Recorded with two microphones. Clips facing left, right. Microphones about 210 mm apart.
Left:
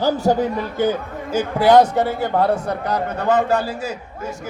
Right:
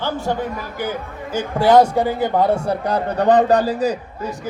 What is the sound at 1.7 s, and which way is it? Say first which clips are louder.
A man's voice: even; 10° right (ahead or behind).